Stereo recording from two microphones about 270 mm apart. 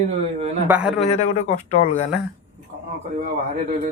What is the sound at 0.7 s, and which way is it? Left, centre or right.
Speech, centre.